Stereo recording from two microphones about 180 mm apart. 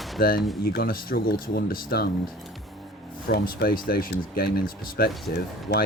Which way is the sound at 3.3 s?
55° left (ahead or behind).